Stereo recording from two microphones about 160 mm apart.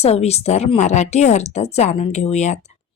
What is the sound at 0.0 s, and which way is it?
Speech, 40° left (ahead or behind).